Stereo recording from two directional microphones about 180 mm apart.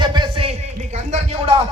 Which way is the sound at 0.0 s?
25° right (ahead or behind).